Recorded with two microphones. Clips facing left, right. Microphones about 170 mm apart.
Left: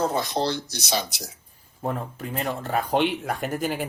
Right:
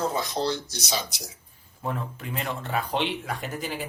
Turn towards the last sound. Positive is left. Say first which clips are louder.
# left 5 dB
turn(degrees=50)  # may be behind; listen again after turning